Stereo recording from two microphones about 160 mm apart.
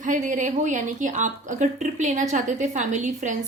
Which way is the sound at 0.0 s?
50° right (ahead or behind).